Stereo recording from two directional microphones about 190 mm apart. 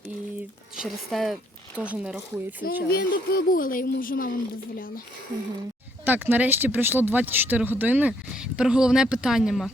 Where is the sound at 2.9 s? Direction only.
50° left (ahead or behind).